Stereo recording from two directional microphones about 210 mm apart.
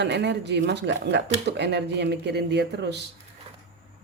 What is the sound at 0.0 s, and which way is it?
Speech, 55° right (ahead or behind).